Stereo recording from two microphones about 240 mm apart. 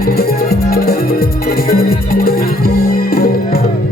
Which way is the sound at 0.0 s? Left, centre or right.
Left.